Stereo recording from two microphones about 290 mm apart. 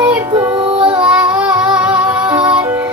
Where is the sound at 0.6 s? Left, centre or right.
Centre.